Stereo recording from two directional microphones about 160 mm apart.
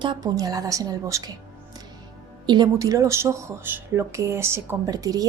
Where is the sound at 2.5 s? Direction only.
25° right (ahead or behind).